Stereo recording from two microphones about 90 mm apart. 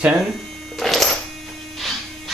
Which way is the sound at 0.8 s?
Centre (ahead or behind).